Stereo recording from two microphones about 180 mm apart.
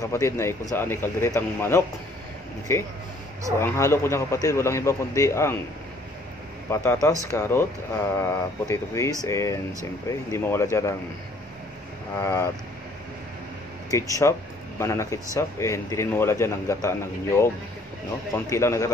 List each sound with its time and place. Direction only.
0.0 s speech: 15° left (ahead or behind)
6.7 s speech: 15° left (ahead or behind)
12.2 s speech: 15° left (ahead or behind)
13.8 s speech: 20° left (ahead or behind)